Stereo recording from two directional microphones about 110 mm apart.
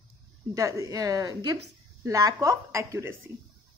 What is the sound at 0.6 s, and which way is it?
A woman's voice, 30° right (ahead or behind).